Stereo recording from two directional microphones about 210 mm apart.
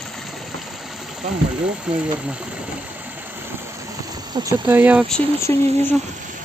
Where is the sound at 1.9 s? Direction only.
5° right (ahead or behind).